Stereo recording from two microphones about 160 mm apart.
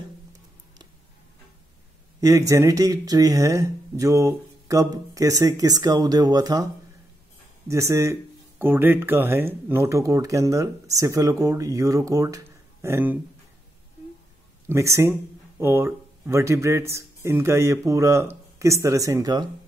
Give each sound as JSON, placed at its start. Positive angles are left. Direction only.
{"t": 2.1, "sound": "speech", "side_deg": -20}
{"t": 7.6, "sound": "speech", "side_deg": -20}
{"t": 14.7, "sound": "speech", "side_deg": -20}